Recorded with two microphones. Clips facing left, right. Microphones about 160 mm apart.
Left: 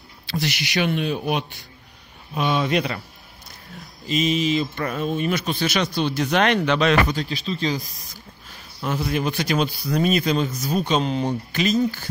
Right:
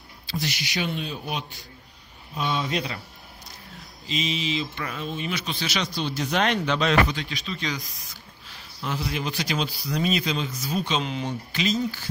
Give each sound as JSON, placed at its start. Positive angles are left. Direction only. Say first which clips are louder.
{"t": 0.3, "sound": "speech", "louder": "left 5 dB", "side_deg": 70}
{"t": 4.1, "sound": "speech", "louder": "left 7 dB", "side_deg": 50}
{"t": 7.1, "sound": "speech", "louder": "left 5 dB", "side_deg": 35}
{"t": 8.5, "sound": "speech", "louder": "left 5 dB", "side_deg": 50}